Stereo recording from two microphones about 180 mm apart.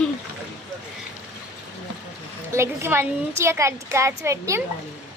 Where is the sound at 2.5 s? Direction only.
15° right (ahead or behind).